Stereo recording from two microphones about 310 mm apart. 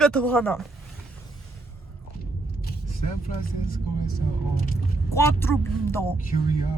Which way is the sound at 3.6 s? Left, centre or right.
Left.